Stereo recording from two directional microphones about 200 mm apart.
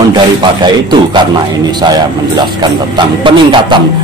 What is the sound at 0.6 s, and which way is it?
A man's voice, 20° right (ahead or behind).